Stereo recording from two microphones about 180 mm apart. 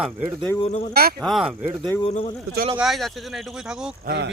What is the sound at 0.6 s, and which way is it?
Speech, 35° left (ahead or behind).